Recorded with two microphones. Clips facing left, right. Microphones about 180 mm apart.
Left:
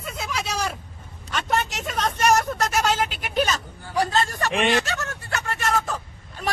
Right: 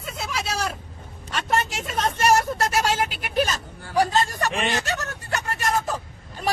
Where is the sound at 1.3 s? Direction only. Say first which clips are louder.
Even; 5° right (ahead or behind).